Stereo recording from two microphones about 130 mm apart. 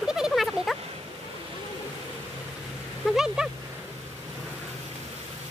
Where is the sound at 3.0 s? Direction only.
5° right (ahead or behind).